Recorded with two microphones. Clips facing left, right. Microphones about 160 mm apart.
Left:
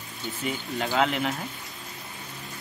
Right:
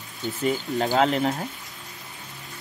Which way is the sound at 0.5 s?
40° right (ahead or behind).